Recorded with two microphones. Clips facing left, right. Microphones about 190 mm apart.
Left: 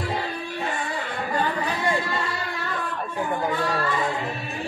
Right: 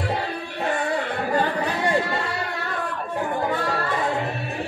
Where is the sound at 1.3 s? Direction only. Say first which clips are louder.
Right 2 dB; 60° right (ahead or behind).